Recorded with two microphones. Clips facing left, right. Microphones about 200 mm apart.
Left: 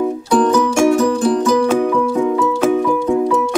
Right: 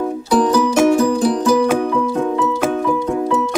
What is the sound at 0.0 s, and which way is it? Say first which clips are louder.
Music: left 1 dB; centre (ahead or behind).